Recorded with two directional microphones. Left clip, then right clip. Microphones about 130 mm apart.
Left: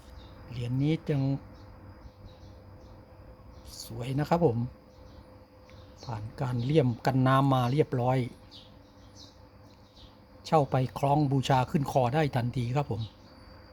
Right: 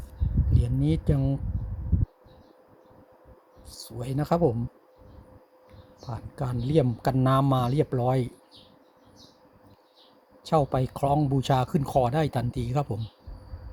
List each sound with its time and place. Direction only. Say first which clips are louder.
0.5 s speech: right 2 dB; 25° right (ahead or behind)
3.7 s speech: right 2 dB; 20° right (ahead or behind)
6.1 s speech: right 1 dB; 20° right (ahead or behind)
10.4 s speech: right 1 dB; 20° right (ahead or behind)